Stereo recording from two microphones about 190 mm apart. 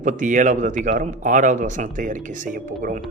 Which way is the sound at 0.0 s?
40° right (ahead or behind).